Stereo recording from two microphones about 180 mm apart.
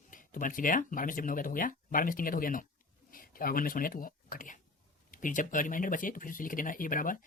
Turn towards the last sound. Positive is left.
turn(degrees=50)  # may be behind; listen again after turning